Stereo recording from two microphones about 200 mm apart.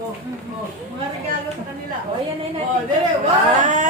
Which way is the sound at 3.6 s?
40° right (ahead or behind).